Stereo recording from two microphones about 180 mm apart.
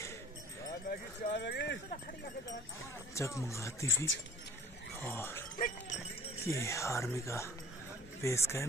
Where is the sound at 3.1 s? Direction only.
15° left (ahead or behind).